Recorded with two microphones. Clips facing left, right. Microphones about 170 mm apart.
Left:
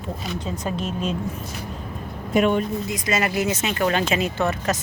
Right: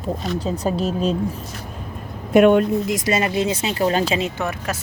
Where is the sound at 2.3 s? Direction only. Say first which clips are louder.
Right 7 dB; 60° right (ahead or behind).